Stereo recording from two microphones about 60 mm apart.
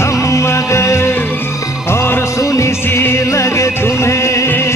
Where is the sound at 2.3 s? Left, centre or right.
Left.